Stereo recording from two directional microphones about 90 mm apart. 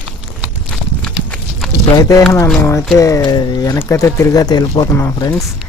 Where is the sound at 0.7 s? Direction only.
10° left (ahead or behind).